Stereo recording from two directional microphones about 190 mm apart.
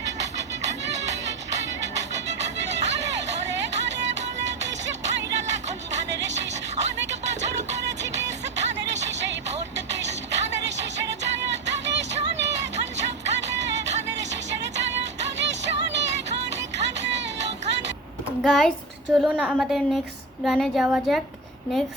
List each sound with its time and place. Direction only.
1.5 s music: 65° right (ahead or behind)
18.4 s a woman's voice: centre (ahead or behind)